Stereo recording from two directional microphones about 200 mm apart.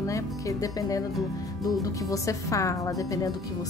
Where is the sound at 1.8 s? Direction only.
15° left (ahead or behind).